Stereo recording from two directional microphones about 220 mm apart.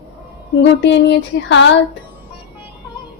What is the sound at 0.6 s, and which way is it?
Speech, 55° left (ahead or behind).